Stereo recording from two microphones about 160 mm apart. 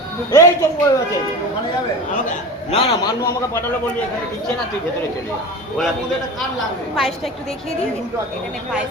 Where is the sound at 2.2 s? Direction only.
45° left (ahead or behind).